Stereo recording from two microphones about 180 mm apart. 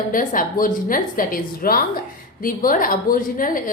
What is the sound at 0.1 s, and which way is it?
A woman's voice, 50° left (ahead or behind).